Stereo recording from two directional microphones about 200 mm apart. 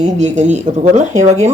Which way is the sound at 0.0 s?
35° right (ahead or behind).